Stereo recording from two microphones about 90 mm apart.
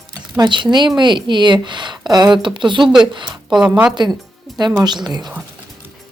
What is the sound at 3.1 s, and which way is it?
Speech, 60° right (ahead or behind).